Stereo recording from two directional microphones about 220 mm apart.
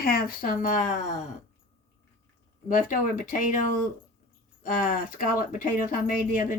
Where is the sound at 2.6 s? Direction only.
35° left (ahead or behind).